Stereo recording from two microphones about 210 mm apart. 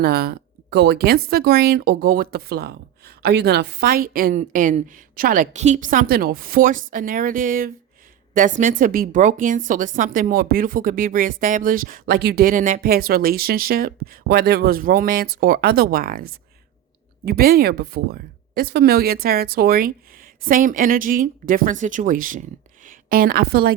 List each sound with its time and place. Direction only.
0.0 s a woman's voice: 50° right (ahead or behind)
17.2 s a woman's voice: 45° right (ahead or behind)